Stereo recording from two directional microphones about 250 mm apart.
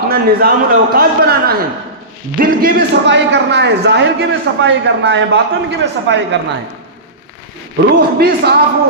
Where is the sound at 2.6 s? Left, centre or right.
Right.